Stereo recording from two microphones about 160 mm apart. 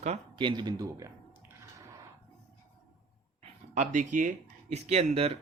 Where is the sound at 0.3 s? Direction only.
30° right (ahead or behind).